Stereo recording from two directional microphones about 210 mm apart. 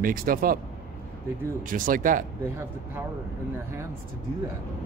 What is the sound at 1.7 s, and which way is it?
Speech, 40° right (ahead or behind).